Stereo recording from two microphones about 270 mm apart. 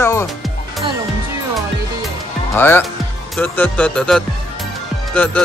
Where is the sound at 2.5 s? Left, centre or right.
Centre.